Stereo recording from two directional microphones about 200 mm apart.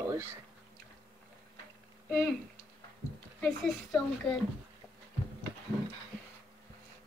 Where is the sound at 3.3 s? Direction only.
5° left (ahead or behind).